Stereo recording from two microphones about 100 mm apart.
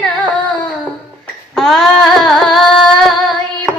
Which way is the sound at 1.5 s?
Centre (ahead or behind).